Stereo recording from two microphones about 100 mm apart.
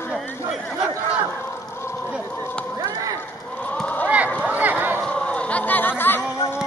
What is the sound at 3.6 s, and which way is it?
Run, 15° left (ahead or behind).